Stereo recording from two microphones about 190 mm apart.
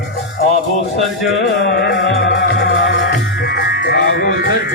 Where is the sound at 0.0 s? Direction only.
55° left (ahead or behind).